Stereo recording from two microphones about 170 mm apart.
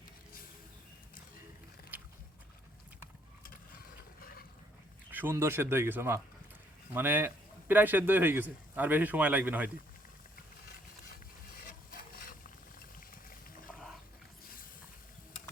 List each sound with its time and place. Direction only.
3.8 s a sound: 60° left (ahead or behind)
5.1 s a man's voice: 15° right (ahead or behind)
11.6 s wood: 60° left (ahead or behind)
13.7 s dog: centre (ahead or behind)